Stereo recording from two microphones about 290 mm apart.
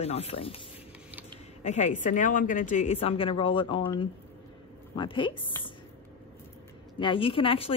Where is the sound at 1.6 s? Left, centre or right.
Left.